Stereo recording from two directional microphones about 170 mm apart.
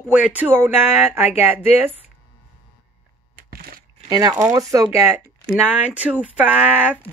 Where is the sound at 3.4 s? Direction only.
60° right (ahead or behind).